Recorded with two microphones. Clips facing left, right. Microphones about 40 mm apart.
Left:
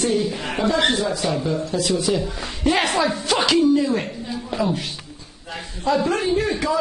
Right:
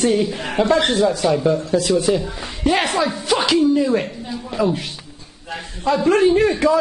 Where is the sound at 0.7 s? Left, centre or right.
Centre.